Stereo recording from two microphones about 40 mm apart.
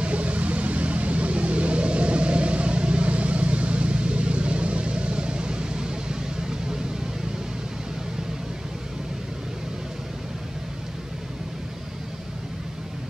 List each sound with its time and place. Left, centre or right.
0.0 s vehicle: right